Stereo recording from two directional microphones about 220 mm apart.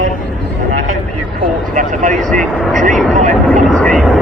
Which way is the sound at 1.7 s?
35° right (ahead or behind).